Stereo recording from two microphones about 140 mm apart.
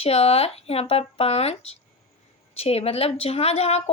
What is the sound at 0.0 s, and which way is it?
A woman's voice, 45° left (ahead or behind).